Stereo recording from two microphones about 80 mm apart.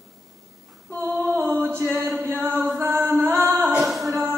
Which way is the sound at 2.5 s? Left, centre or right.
Centre.